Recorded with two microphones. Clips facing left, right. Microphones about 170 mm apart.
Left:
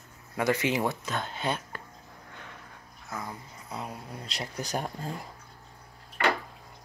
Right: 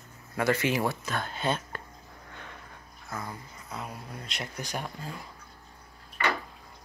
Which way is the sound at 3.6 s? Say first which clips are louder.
Left 1 dB; 30° left (ahead or behind).